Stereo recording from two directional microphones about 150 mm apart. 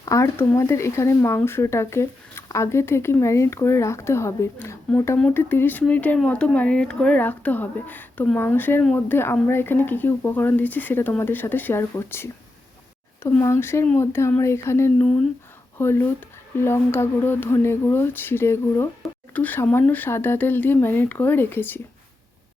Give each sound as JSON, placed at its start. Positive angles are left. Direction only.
{"t": 0.0, "sound": "speech", "side_deg": 20}